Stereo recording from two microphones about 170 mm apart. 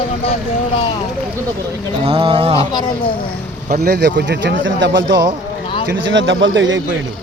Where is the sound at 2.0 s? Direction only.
30° right (ahead or behind).